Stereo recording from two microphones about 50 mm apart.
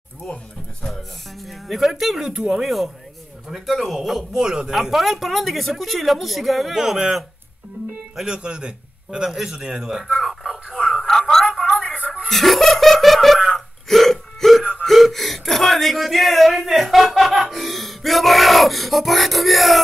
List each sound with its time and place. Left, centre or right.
0.8 s speech: centre
4.3 s speech: centre
8.3 s a man's voice: centre
10.0 s a sound: centre
10.9 s music: centre
12.3 s laughter: centre
13.6 s hiccup: centre
14.8 s speech: centre